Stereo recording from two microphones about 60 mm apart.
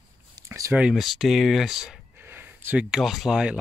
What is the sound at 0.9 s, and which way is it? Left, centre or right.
Speech, centre.